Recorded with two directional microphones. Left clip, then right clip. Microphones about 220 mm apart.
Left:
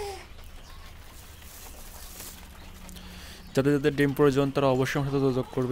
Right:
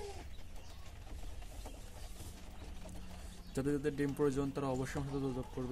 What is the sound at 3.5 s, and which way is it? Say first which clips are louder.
A man's voice: left 13 dB; 45° left (ahead or behind).